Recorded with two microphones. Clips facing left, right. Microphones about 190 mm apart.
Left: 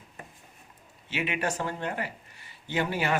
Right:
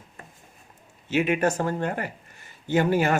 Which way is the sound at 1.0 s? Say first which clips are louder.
Right 8 dB; 45° right (ahead or behind).